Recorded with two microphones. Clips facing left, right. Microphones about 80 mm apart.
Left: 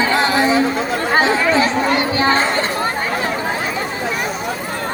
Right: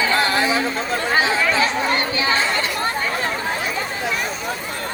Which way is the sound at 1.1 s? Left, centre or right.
Left.